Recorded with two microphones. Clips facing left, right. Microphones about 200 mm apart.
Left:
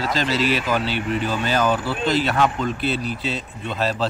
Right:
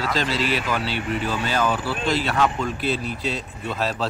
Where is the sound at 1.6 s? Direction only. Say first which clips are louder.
Left 3 dB; 25° left (ahead or behind).